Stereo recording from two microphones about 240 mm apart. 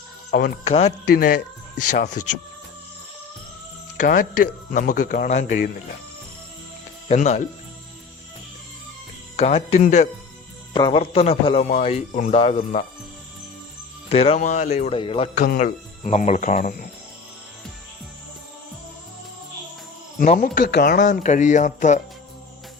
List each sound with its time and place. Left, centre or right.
0.3 s speech: left
0.7 s speech: left
1.1 s speech: left
2.2 s speech: left
4.0 s speech: left
7.1 s speech: left
9.3 s speech: left
14.1 s speech: left
20.1 s speech: left